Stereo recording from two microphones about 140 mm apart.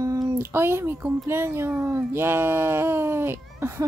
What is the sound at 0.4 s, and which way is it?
A woman's voice, 15° right (ahead or behind).